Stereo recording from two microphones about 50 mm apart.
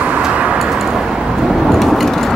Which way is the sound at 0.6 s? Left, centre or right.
Centre.